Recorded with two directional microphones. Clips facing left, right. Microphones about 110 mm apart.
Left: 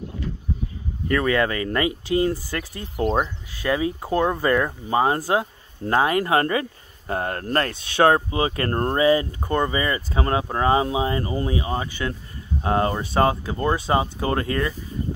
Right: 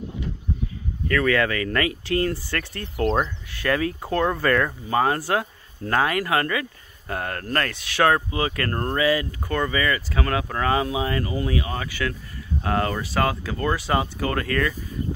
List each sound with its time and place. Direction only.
1.0 s speech: 20° left (ahead or behind)